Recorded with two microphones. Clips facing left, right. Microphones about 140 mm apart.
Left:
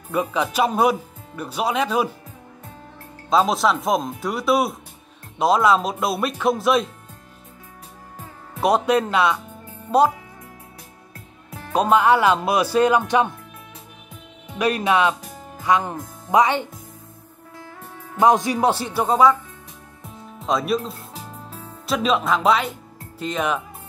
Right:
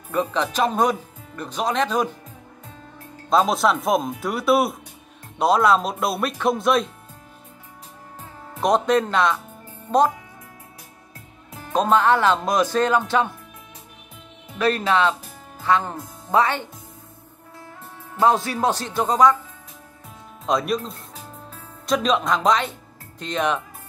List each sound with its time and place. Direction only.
0.1 s speech: 10° left (ahead or behind)
3.3 s speech: centre (ahead or behind)
8.5 s speech: 5° left (ahead or behind)
11.7 s speech: 10° left (ahead or behind)
14.6 s speech: 15° left (ahead or behind)
18.1 s speech: 15° left (ahead or behind)
20.4 s speech: centre (ahead or behind)